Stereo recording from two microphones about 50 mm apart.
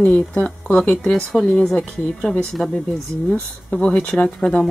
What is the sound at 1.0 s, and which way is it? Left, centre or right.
Speech, centre.